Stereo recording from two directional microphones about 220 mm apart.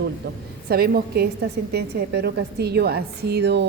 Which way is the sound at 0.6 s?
45° right (ahead or behind).